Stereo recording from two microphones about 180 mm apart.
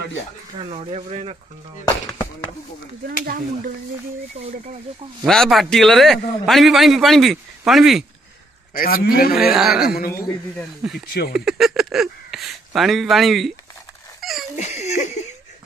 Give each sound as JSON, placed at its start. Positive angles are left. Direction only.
{"t": 0.6, "sound": "speech", "side_deg": -30}
{"t": 4.4, "sound": "speech", "side_deg": -40}
{"t": 5.2, "sound": "a man's voice", "side_deg": 0}
{"t": 8.7, "sound": "a man's voice", "side_deg": 55}
{"t": 9.3, "sound": "a man's voice", "side_deg": -5}
{"t": 9.8, "sound": "a man's voice", "side_deg": 55}
{"t": 10.8, "sound": "a man's voice", "side_deg": -5}
{"t": 14.2, "sound": "a sound", "side_deg": 0}
{"t": 14.6, "sound": "a sound", "side_deg": 40}